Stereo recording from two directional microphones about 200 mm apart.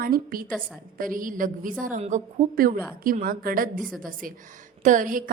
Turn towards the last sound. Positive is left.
turn(degrees=-40)  # may be behind; listen again after turning